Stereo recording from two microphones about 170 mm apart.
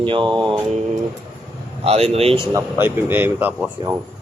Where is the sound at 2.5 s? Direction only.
10° right (ahead or behind).